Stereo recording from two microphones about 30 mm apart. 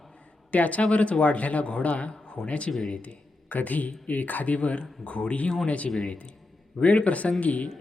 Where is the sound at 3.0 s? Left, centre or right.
Left.